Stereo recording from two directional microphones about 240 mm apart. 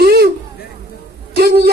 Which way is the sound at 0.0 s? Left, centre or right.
Right.